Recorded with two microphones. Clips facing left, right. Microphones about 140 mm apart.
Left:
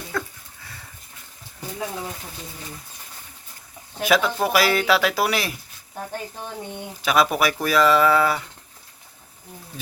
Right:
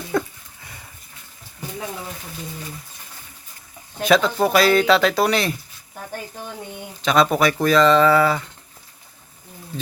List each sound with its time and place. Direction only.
0.1 s dog: 20° right (ahead or behind)
4.0 s speech: 5° left (ahead or behind)
7.0 s speech: 5° left (ahead or behind)